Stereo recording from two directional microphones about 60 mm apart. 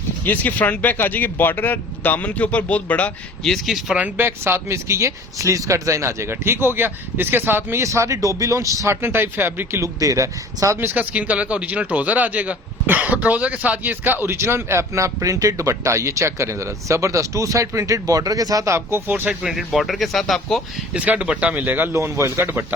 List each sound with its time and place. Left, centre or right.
0.3 s speech: left
3.4 s speech: centre
4.2 s a man's voice: right
7.8 s speech: right
8.9 s speech: right
9.8 s speech: right
10.8 s a man's voice: right
18.7 s speech: right
19.5 s speech: centre
20.9 s speech: right
21.7 s speech: right
21.9 s a man's voice: right